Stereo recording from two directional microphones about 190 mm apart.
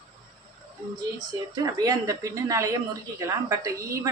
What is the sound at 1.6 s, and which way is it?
A woman's voice, 20° right (ahead or behind).